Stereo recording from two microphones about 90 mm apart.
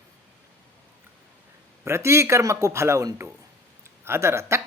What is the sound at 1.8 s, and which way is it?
Speech, 30° right (ahead or behind).